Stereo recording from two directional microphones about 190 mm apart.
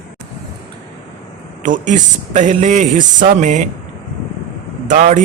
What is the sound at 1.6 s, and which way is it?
Speech, 40° right (ahead or behind).